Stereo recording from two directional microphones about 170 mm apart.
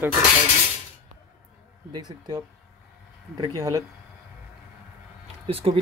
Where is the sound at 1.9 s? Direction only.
25° right (ahead or behind).